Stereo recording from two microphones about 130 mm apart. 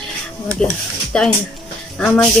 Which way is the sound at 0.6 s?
5° left (ahead or behind).